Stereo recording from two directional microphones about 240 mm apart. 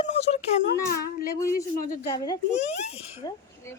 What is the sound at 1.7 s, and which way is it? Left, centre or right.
Speech, left.